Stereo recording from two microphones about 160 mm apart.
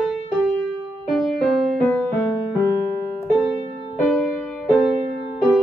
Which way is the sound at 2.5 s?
20° left (ahead or behind).